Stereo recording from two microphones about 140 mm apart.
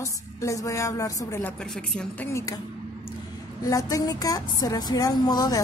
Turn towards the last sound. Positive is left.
turn(degrees=25)  # may be behind; listen again after turning